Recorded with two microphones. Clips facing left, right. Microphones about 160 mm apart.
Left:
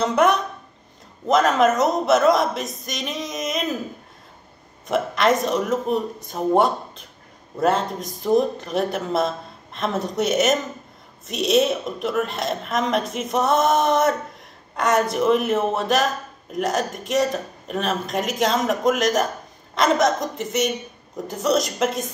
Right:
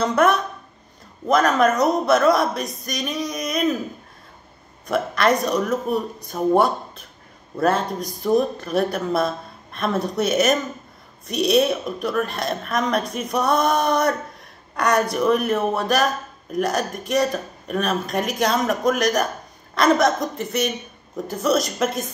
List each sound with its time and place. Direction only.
0.0 s speech: 20° left (ahead or behind)
4.8 s speech: 20° left (ahead or behind)